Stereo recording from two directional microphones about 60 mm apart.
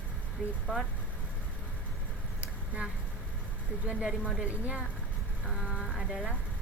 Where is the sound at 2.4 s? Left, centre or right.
Right.